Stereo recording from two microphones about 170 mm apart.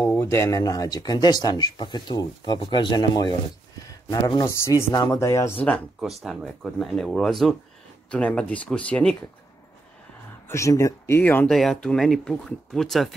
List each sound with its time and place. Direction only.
0.0 s speech: 15° left (ahead or behind)
5.7 s speech: centre (ahead or behind)
10.5 s speech: 20° left (ahead or behind)
11.4 s speech: centre (ahead or behind)